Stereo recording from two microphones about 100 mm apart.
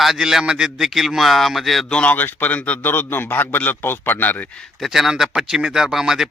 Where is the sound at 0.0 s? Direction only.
5° right (ahead or behind); by 4.4 s 20° left (ahead or behind).